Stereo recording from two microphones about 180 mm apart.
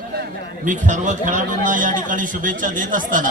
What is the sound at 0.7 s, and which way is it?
A man's voice, 45° right (ahead or behind).